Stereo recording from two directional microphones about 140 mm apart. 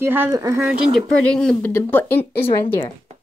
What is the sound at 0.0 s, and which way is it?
Speech, 15° right (ahead or behind).